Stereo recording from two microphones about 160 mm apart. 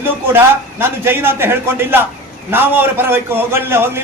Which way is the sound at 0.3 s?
15° right (ahead or behind).